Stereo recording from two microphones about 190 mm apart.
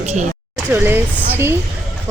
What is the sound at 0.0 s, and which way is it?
Speech, 35° right (ahead or behind).